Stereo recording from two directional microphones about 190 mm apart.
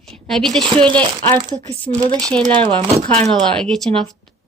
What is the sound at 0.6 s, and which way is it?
Speech, 25° right (ahead or behind).